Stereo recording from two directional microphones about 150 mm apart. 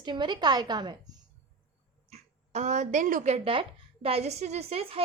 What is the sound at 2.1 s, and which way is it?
Speech, 50° right (ahead or behind).